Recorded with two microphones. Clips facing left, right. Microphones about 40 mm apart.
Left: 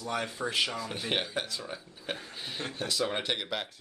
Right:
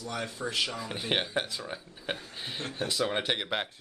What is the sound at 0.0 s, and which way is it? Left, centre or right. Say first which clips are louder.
Speech: left 2 dB; left.